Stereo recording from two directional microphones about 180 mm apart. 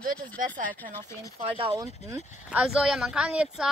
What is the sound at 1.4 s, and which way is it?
Speech, 30° right (ahead or behind).